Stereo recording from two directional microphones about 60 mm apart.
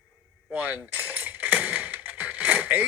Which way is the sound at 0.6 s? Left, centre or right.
Right.